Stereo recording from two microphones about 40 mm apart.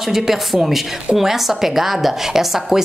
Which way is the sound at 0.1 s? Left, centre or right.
Centre.